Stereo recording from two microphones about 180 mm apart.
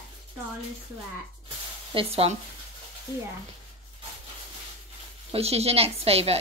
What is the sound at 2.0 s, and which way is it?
Speech, 35° right (ahead or behind).